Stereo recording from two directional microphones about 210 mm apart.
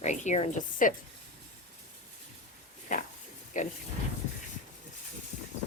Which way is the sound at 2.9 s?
40° left (ahead or behind).